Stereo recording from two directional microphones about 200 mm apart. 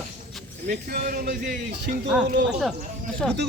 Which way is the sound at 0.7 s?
45° right (ahead or behind).